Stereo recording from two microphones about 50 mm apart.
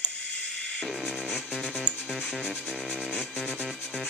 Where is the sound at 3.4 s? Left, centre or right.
Centre.